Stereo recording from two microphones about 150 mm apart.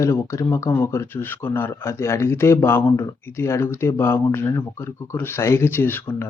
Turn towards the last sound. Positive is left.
turn(degrees=15)  # may be behind; listen again after turning